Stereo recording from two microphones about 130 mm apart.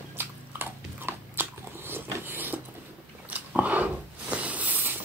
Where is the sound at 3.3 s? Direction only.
10° right (ahead or behind).